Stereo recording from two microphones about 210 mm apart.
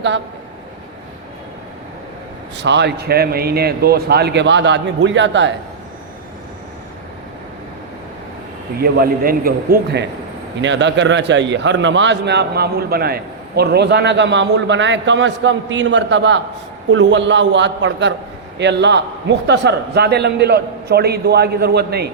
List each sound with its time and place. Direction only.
2.6 s a man's voice: 55° right (ahead or behind)
8.8 s a man's voice: 45° right (ahead or behind)